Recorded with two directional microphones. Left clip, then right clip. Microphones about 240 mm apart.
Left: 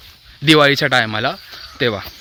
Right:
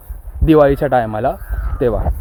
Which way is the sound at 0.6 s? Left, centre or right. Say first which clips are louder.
Right 1 dB; left.